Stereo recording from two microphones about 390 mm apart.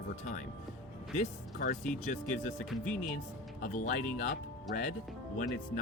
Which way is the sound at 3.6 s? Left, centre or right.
Centre.